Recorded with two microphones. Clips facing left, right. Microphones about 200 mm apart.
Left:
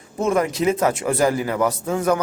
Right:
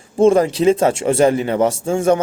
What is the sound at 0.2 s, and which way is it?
Speech, 30° right (ahead or behind).